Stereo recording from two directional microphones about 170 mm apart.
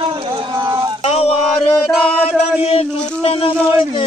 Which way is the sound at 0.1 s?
25° right (ahead or behind).